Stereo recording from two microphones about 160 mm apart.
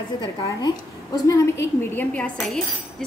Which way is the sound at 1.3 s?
15° left (ahead or behind).